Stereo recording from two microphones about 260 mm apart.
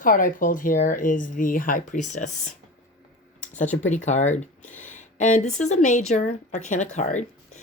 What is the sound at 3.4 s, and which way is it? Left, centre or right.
Speech, left.